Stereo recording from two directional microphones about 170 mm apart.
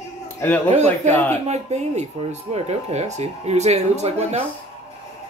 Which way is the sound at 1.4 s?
40° right (ahead or behind).